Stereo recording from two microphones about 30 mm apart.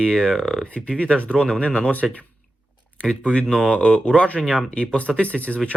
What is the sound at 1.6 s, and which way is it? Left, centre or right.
Speech, left.